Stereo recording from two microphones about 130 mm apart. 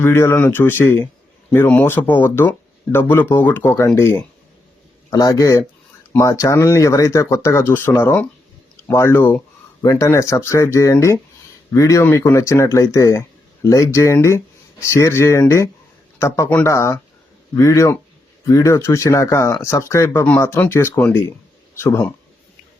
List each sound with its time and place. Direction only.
0.0 s speech: 20° left (ahead or behind)